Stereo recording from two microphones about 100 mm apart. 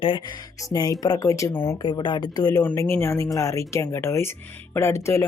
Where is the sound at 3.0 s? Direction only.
30° left (ahead or behind).